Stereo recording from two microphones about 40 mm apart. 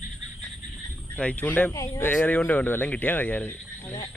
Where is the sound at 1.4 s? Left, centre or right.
Left.